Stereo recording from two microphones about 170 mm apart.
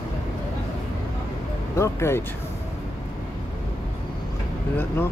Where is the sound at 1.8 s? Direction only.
15° left (ahead or behind).